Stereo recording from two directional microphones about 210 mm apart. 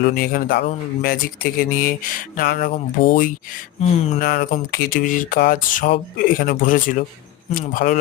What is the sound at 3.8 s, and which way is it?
Speech, 30° left (ahead or behind).